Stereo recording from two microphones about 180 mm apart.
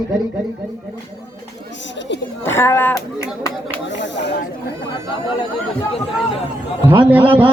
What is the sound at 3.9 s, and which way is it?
Speech, 80° left.